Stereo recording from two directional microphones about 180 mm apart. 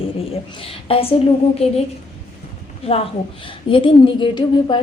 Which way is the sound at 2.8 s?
35° left (ahead or behind).